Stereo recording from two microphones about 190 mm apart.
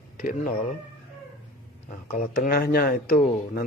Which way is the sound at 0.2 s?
35° left (ahead or behind).